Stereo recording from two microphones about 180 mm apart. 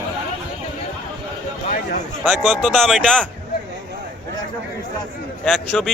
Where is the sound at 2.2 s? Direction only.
5° left (ahead or behind).